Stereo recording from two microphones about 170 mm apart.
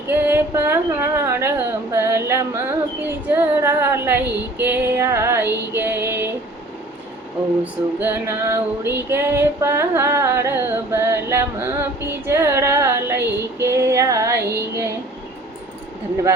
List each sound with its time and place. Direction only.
0.1 s speech: 10° right (ahead or behind)
4.5 s female singing: 10° right (ahead or behind)
7.6 s female singing: 10° right (ahead or behind)